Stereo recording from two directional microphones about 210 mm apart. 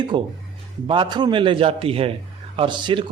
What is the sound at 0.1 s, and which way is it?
Speech, 20° right (ahead or behind).